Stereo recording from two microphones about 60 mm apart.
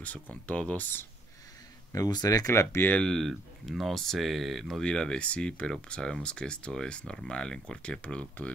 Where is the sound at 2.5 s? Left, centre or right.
Left.